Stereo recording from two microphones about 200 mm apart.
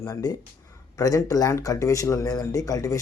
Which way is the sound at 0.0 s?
20° left (ahead or behind).